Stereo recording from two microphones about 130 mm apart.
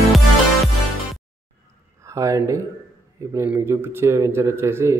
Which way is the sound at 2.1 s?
25° right (ahead or behind).